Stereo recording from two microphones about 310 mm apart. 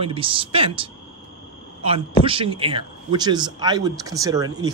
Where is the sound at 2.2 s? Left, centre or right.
Centre.